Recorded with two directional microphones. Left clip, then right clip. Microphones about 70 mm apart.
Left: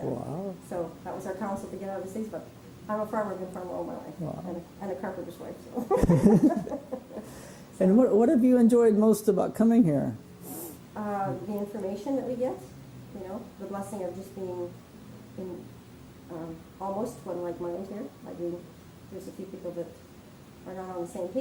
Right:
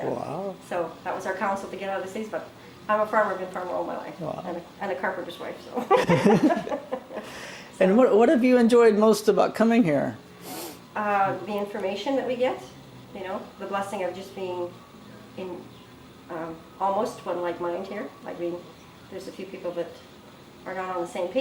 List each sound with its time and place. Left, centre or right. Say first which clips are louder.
0.0 s a sound: right 5 dB; right
0.8 s a woman's voice: right 6 dB; right
3.7 s a woman's voice: right 6 dB; right
4.3 s a woman's voice: right 6 dB; right
13.2 s a woman's voice: right 6 dB; right
13.7 s a woman's voice: right 7 dB; right
16.3 s a woman's voice: right 6 dB; right
17.8 s a woman's voice: right 6 dB; right
20.7 s a woman's voice: right 7 dB; right